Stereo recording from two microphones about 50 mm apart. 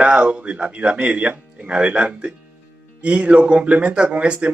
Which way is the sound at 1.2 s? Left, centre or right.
Right.